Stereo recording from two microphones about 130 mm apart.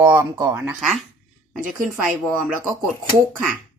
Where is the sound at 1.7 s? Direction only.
5° right (ahead or behind).